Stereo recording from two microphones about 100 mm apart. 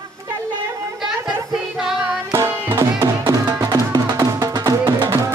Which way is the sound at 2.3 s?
30° right (ahead or behind).